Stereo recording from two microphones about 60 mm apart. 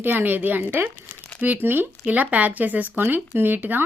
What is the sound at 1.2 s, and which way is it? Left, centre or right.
Crumpling, left.